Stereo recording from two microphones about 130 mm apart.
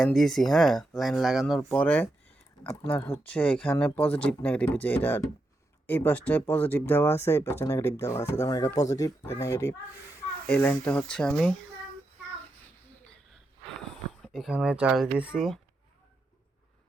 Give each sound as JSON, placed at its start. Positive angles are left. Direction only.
{"t": 0.0, "sound": "speech", "side_deg": 0}
{"t": 1.8, "sound": "speech", "side_deg": 10}
{"t": 14.1, "sound": "speech", "side_deg": 0}